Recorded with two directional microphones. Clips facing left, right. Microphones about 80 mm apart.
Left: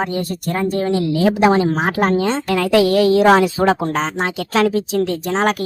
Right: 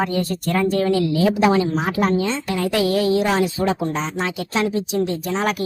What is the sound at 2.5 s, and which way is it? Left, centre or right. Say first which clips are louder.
Speech: left 6 dB; left.